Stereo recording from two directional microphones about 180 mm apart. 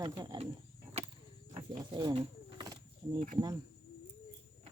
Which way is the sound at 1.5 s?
25° right (ahead or behind).